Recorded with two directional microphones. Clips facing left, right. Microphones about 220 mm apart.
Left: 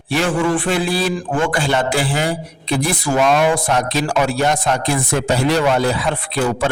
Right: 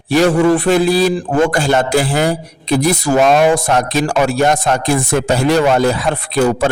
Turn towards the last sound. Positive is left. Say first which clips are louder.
# right 5 dB
turn(degrees=-45)  # may be behind; listen again after turning